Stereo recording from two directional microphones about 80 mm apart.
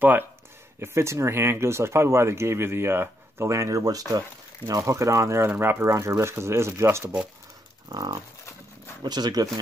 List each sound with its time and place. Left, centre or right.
0.0 s speech: right
0.7 s speech: right
5.9 s speech: right
7.9 s speech: right